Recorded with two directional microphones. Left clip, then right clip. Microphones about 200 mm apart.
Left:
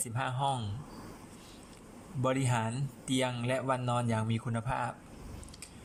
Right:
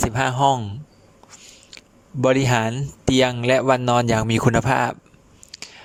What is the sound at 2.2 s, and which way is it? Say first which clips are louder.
A man's voice: right 14 dB; 50° right (ahead or behind).